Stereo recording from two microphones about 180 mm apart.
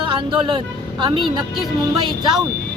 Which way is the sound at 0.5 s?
25° right (ahead or behind).